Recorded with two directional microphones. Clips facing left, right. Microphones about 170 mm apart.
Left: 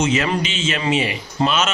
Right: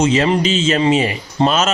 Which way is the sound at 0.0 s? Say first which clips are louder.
Right 5 dB; 30° right (ahead or behind).